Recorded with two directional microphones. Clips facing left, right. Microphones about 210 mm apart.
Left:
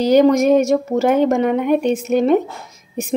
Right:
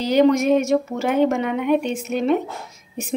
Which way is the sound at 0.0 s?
40° left (ahead or behind).